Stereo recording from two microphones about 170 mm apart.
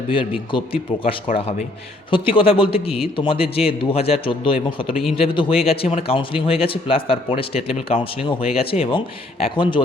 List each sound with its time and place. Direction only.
0.1 s speech: 30° left (ahead or behind)